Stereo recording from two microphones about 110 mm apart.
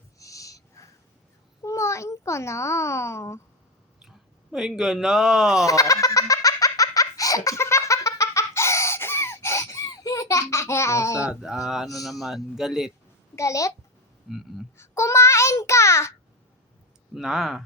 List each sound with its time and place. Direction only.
0.2 s a sound: 30° left (ahead or behind)
1.6 s a child's voice: 25° left (ahead or behind)
4.5 s speech: 5° right (ahead or behind)
5.6 s laughter: 30° left (ahead or behind)
11.2 s speech: 5° right (ahead or behind)
13.3 s a child's voice: 30° left (ahead or behind)
14.3 s speech: 5° right (ahead or behind)
14.8 s child singing: 25° left (ahead or behind)
17.2 s speech: 5° right (ahead or behind)